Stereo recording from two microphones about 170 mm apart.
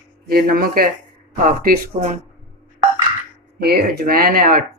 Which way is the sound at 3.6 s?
70° right (ahead or behind).